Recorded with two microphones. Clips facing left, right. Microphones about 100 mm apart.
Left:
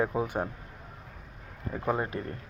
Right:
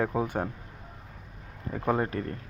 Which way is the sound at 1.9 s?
10° left (ahead or behind).